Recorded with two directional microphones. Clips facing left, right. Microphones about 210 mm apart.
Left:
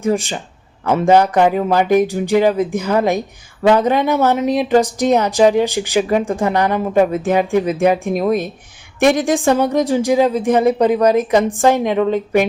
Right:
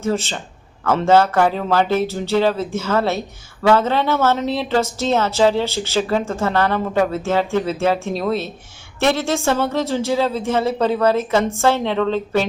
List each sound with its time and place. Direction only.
0.0 s speech: 15° left (ahead or behind)